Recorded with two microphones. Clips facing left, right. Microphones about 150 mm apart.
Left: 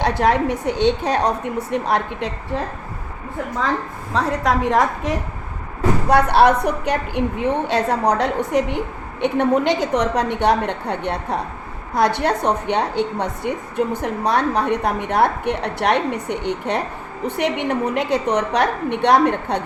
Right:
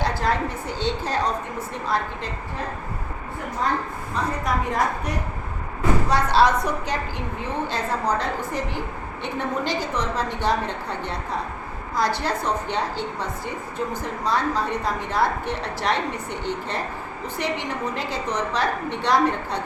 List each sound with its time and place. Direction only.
0.0 s a woman's voice: 70° left (ahead or behind)
4.1 s a woman's voice: 90° left
6.1 s a woman's voice: 60° left (ahead or behind)